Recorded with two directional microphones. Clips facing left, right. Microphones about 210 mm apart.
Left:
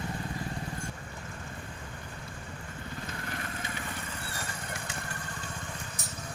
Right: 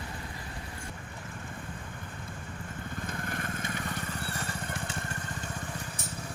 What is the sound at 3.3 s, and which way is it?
Vehicle, 50° right (ahead or behind).